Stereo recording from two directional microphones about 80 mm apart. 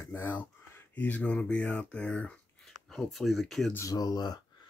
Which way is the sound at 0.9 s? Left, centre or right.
Left.